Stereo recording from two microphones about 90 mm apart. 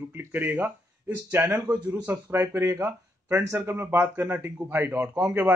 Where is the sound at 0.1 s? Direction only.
25° right (ahead or behind).